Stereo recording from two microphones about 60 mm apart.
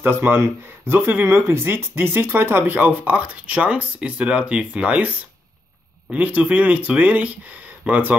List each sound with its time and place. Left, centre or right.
0.0 s speech: right